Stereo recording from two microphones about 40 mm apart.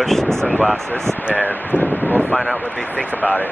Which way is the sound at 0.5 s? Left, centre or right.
Left.